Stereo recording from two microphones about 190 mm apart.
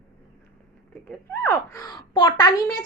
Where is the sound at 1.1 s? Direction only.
5° left (ahead or behind).